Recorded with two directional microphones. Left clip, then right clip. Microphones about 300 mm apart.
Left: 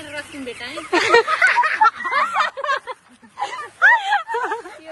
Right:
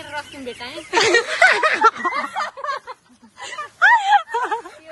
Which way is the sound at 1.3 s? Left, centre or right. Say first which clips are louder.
Right 1 dB; centre.